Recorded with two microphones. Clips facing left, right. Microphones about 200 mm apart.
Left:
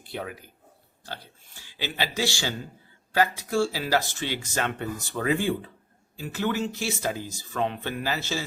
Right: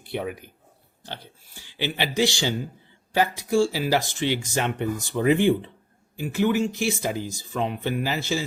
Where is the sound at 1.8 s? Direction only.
15° right (ahead or behind).